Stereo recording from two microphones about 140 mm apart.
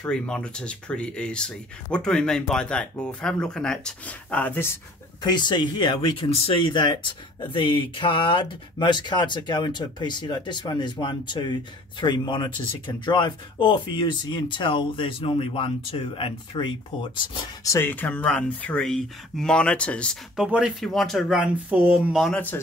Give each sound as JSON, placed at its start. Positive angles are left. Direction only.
{"t": 0.0, "sound": "speech", "side_deg": 5}
{"t": 5.2, "sound": "speech", "side_deg": 30}
{"t": 17.6, "sound": "speech", "side_deg": 15}
{"t": 20.3, "sound": "speech", "side_deg": -5}
{"t": 22.2, "sound": "speech", "side_deg": 10}